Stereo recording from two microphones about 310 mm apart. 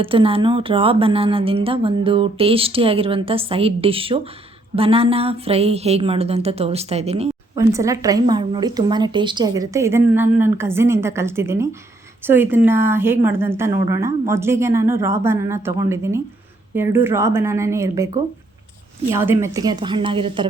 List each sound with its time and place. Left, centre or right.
0.0 s a woman's voice: centre
7.6 s speech: centre